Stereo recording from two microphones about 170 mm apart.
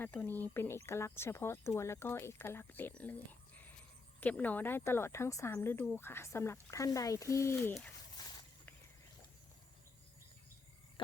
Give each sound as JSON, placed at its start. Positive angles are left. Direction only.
{"t": 0.0, "sound": "speech", "side_deg": 10}
{"t": 4.2, "sound": "speech", "side_deg": 10}
{"t": 7.7, "sound": "speech", "side_deg": 5}
{"t": 8.2, "sound": "a sound", "side_deg": 20}